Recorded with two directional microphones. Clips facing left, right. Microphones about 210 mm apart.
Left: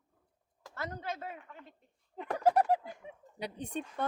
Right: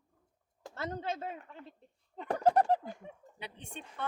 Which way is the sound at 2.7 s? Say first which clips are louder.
Even; 5° left (ahead or behind).